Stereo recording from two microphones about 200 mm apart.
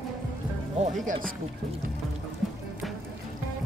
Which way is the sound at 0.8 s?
40° right (ahead or behind).